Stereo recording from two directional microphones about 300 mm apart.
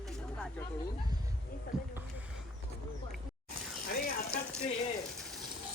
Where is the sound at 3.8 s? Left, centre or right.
Left.